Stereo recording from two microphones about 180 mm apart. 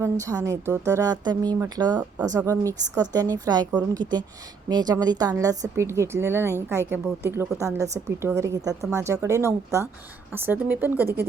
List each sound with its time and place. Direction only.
0.0 s a woman's voice: 15° right (ahead or behind)